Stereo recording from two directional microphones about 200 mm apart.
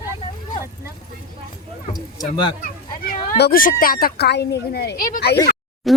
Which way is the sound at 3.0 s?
50° left (ahead or behind).